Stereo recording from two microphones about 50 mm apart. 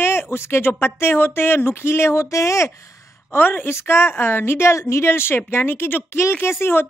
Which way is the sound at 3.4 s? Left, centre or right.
Left.